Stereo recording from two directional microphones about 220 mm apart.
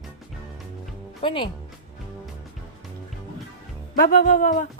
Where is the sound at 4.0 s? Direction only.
40° left (ahead or behind).